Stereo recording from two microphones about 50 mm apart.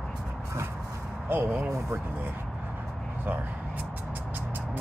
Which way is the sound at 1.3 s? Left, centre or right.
Right.